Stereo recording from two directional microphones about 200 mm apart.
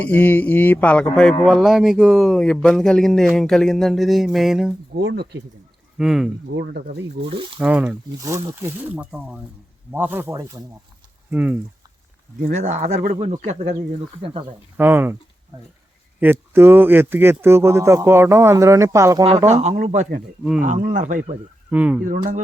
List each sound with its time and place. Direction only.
0.0 s speech: 10° left (ahead or behind)
4.9 s speech: 55° right (ahead or behind)
6.0 s speech: centre (ahead or behind)
7.6 s speech: 5° right (ahead or behind)
12.4 s speech: 35° right (ahead or behind)
14.8 s speech: 10° right (ahead or behind)
16.2 s speech: 10° right (ahead or behind)
19.5 s speech: 35° right (ahead or behind)
21.7 s speech: 5° right (ahead or behind)
22.0 s speech: 40° right (ahead or behind)